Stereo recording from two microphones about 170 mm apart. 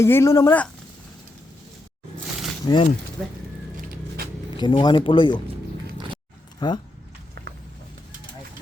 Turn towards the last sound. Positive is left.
turn(degrees=25)  # may be behind; listen again after turning